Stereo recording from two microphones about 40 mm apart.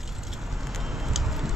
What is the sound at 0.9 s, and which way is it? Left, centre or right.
Vehicle, centre.